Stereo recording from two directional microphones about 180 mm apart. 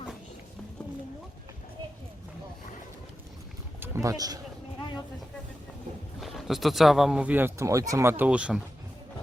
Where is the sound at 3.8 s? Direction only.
15° right (ahead or behind).